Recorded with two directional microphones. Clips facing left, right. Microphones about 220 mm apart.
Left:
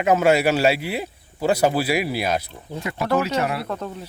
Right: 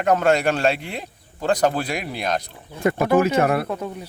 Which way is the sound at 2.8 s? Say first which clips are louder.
Right 5 dB; 50° right (ahead or behind).